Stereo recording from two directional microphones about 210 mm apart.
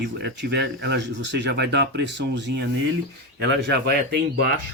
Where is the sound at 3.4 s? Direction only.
55° right (ahead or behind).